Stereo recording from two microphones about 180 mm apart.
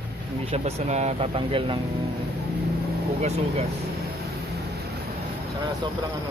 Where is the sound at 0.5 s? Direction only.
35° right (ahead or behind).